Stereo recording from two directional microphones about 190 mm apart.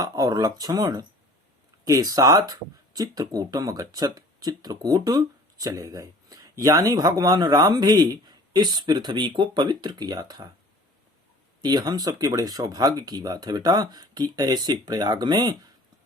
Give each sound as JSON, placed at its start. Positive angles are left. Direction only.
{"t": 0.0, "sound": "speech", "side_deg": -20}
{"t": 11.6, "sound": "speech", "side_deg": -20}